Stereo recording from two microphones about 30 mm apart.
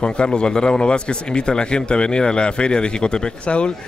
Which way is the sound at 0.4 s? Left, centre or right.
Left.